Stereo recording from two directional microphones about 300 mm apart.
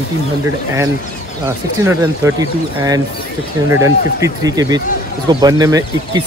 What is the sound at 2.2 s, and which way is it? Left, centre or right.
Speech, centre.